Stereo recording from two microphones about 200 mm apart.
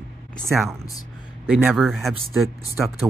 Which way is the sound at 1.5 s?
5° right (ahead or behind).